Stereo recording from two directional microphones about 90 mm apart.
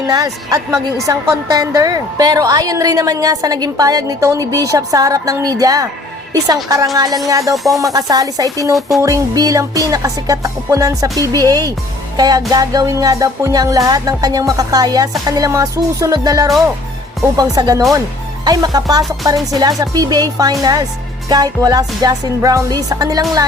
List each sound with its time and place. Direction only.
0.1 s a woman's voice: 45° right (ahead or behind)
6.3 s music: 40° right (ahead or behind)
7.5 s music: centre (ahead or behind)
7.8 s music: 40° right (ahead or behind)
12.5 s a woman's voice: 45° right (ahead or behind)
15.2 s music: 40° right (ahead or behind)
17.3 s a woman's voice: 45° right (ahead or behind)